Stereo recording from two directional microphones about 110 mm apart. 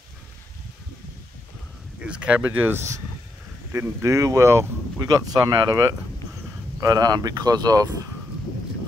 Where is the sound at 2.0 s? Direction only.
10° right (ahead or behind); by 8.0 s 35° right (ahead or behind).